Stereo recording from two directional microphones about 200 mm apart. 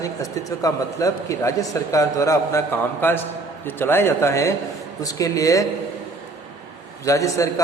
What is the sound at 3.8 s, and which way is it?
A man's voice, 10° left (ahead or behind).